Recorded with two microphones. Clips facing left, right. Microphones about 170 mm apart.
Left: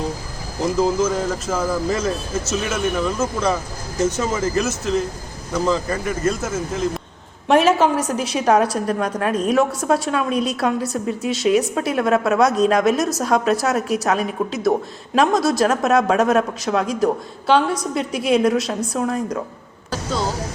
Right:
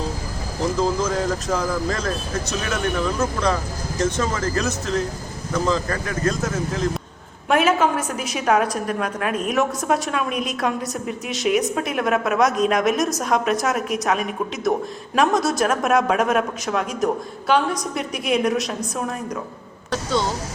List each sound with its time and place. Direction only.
0.8 s speech: 5° left (ahead or behind)
7.4 s a woman's voice: 35° left (ahead or behind)
19.9 s speech: centre (ahead or behind)